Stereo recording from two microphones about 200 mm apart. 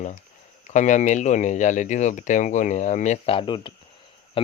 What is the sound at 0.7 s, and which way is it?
Speech, 35° left (ahead or behind).